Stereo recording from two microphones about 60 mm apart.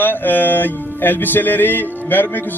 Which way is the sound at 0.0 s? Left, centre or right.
Left.